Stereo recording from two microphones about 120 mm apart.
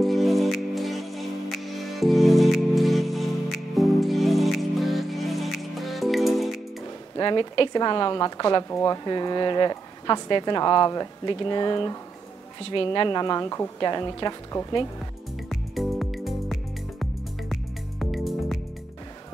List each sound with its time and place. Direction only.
0.0 s music: centre (ahead or behind)
7.2 s speech: 40° left (ahead or behind)
14.5 s speech: 25° left (ahead or behind)
15.7 s music: centre (ahead or behind)